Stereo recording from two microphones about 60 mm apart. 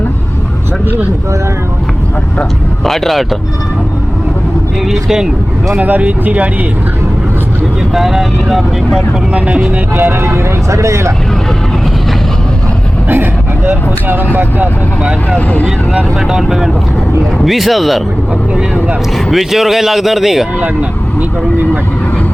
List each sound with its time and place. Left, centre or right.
2.8 s speech: centre
4.9 s speech: centre
5.8 s speech: right
7.9 s speech: centre
9.3 s speech: centre
10.0 s speech: right
10.7 s speech: right
13.7 s speech: right
15.4 s speech: left
16.2 s speech: centre
19.1 s speech: centre